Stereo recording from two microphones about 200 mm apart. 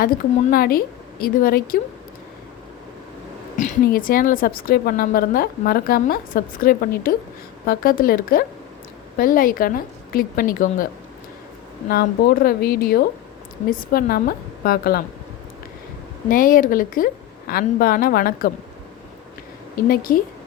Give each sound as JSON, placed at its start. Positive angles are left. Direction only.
{"t": 0.5, "sound": "a woman's voice", "side_deg": 45}
{"t": 3.6, "sound": "a woman's voice", "side_deg": 45}
{"t": 11.9, "sound": "a woman's voice", "side_deg": 50}
{"t": 16.3, "sound": "a woman's voice", "side_deg": 45}
{"t": 19.9, "sound": "a woman's voice", "side_deg": 45}